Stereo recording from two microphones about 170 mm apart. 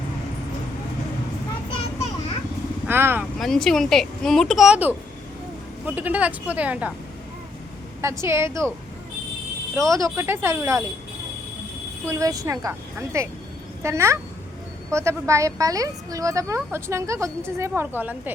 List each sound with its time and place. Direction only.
2.8 s speech: 15° right (ahead or behind)
3.3 s a woman's voice: centre (ahead or behind)
8.2 s a woman's voice: 15° right (ahead or behind)
9.7 s a woman's voice: 20° right (ahead or behind)
12.0 s a woman's voice: 20° right (ahead or behind)